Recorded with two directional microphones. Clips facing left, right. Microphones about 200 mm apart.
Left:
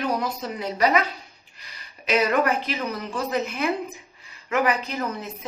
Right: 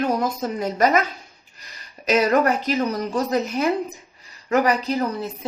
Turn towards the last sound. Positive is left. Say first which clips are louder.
# right 4 dB
turn(degrees=-35)  # may be behind; listen again after turning